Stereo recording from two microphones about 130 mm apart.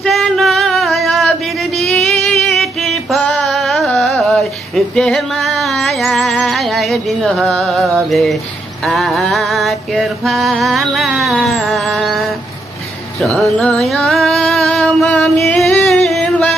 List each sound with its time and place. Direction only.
0.0 s a sound: centre (ahead or behind)
2.2 s music: centre (ahead or behind)
13.4 s music: 5° left (ahead or behind)